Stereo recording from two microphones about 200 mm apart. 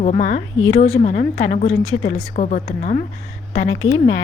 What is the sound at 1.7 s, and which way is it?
Speech, 90° left.